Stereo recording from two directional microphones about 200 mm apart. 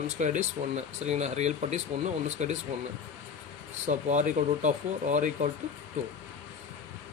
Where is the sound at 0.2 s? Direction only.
35° right (ahead or behind).